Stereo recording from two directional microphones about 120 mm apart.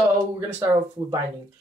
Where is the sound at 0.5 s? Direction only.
30° right (ahead or behind).